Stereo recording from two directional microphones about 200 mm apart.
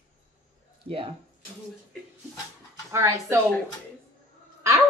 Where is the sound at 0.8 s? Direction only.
30° right (ahead or behind).